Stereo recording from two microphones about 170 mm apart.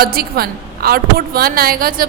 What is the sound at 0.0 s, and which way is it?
A woman's voice, 65° right (ahead or behind).